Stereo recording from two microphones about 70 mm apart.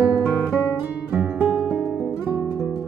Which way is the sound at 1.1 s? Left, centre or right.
Right.